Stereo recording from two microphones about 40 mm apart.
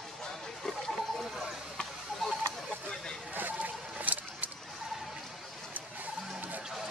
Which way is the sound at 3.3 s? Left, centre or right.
Right.